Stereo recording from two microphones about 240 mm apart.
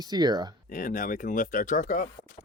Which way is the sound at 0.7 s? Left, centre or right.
Left.